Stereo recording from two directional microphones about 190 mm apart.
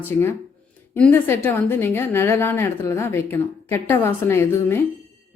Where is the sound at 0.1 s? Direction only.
10° left (ahead or behind).